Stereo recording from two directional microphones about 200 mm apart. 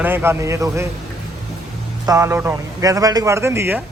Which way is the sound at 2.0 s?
15° right (ahead or behind).